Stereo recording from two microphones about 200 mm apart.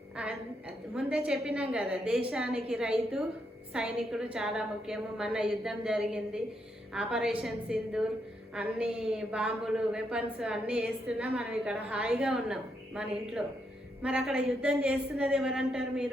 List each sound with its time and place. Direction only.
0.9 s a woman's voice: 5° right (ahead or behind)